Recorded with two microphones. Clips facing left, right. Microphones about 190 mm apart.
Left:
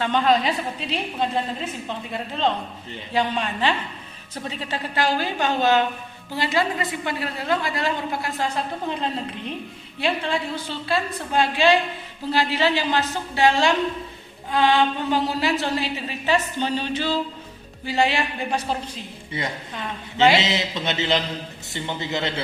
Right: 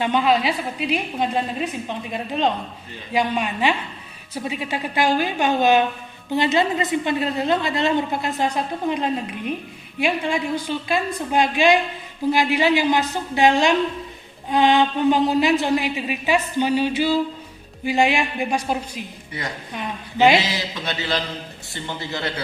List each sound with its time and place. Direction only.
0.0 s a woman's voice: 10° right (ahead or behind)
19.3 s a man's voice: 25° left (ahead or behind)
19.7 s a woman's voice: 15° right (ahead or behind)
20.4 s a man's voice: 25° left (ahead or behind)